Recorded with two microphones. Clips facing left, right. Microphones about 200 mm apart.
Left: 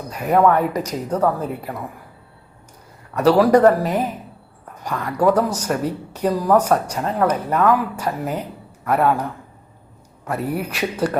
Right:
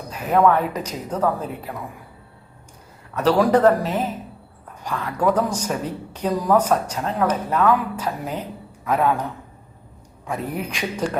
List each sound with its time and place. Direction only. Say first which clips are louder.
0.2 s speech: left 2 dB; 10° left (ahead or behind)
3.2 s speech: left 3 dB; 10° left (ahead or behind)
10.2 s speech: left 3 dB; 10° left (ahead or behind)